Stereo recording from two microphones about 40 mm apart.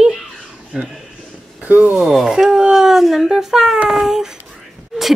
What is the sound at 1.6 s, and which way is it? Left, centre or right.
Speech, right.